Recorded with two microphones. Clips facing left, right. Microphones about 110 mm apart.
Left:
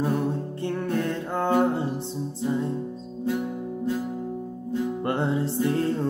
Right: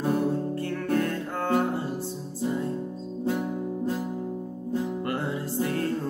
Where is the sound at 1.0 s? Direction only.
25° left (ahead or behind).